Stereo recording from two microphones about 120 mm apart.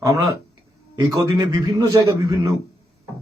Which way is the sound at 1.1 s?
30° right (ahead or behind).